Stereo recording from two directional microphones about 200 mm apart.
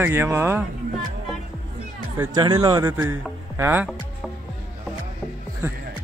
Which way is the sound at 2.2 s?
20° right (ahead or behind).